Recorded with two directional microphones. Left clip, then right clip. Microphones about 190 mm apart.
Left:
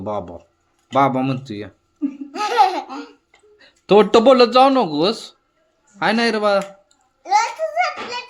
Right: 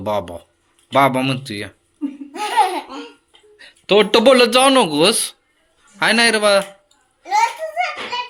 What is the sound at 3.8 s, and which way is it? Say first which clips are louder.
Speech: left 1 dB; 35° left (ahead or behind).